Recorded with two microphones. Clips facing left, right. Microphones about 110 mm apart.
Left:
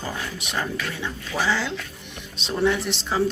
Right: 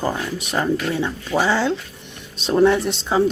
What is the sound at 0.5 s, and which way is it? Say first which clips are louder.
Speech: right 9 dB; 45° right (ahead or behind).